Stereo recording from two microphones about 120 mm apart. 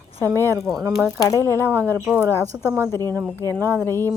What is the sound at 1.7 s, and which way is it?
Speech, 20° right (ahead or behind).